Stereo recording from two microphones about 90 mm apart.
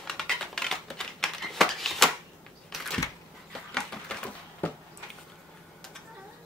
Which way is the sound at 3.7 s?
10° left (ahead or behind).